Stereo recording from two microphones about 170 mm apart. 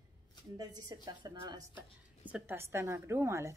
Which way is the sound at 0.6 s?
25° right (ahead or behind).